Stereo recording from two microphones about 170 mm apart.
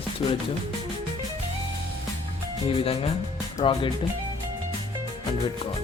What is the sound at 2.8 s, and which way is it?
Speech, 35° left (ahead or behind).